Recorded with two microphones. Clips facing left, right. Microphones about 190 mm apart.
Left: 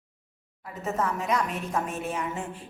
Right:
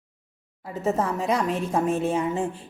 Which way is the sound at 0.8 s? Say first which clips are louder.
Right 4 dB; 30° right (ahead or behind).